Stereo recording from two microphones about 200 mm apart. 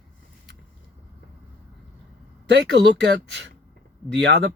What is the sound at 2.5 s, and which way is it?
A man's voice, 60° right (ahead or behind).